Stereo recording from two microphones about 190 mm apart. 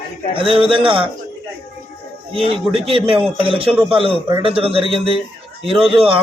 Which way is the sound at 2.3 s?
30° right (ahead or behind).